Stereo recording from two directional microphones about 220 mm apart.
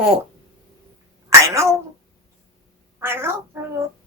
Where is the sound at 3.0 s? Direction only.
10° right (ahead or behind).